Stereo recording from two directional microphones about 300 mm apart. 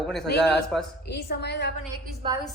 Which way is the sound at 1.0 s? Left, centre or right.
Left.